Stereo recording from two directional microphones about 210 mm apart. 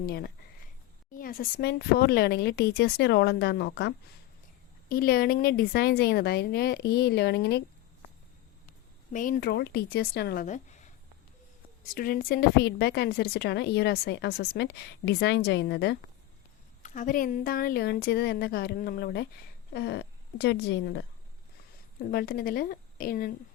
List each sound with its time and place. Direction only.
0.0 s a woman's voice: 50° left (ahead or behind)
9.1 s a woman's voice: 40° left (ahead or behind)
10.4 s speech: 35° left (ahead or behind)
11.9 s a woman's voice: 45° left (ahead or behind)
16.8 s a woman's voice: 35° left (ahead or behind); by 21.0 s 55° left (ahead or behind)
22.1 s a woman's voice: 45° left (ahead or behind)